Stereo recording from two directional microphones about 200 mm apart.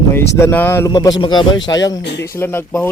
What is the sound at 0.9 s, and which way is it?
A man's voice, 20° left (ahead or behind).